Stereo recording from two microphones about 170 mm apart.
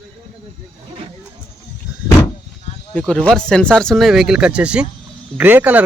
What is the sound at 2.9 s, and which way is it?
Speech, 5° left (ahead or behind).